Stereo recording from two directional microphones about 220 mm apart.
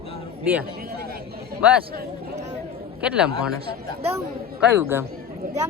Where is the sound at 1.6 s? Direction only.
5° right (ahead or behind).